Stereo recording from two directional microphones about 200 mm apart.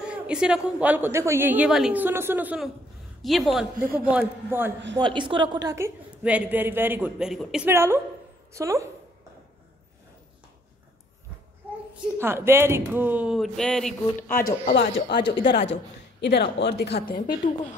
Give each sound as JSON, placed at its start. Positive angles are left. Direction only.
{"t": 0.0, "sound": "a woman's voice", "side_deg": -5}
{"t": 3.7, "sound": "a man's voice", "side_deg": -45}
{"t": 4.5, "sound": "a woman's voice", "side_deg": -10}
{"t": 4.9, "sound": "a woman's voice", "side_deg": -25}
{"t": 11.9, "sound": "a woman's voice", "side_deg": -10}
{"t": 14.3, "sound": "a man's voice", "side_deg": 50}
{"t": 15.1, "sound": "speech", "side_deg": 25}
{"t": 16.2, "sound": "speech", "side_deg": 60}